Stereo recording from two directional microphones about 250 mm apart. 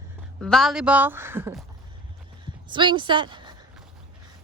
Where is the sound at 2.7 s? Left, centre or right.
Centre.